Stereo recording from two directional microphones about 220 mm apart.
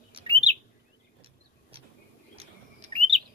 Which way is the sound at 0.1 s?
30° right (ahead or behind).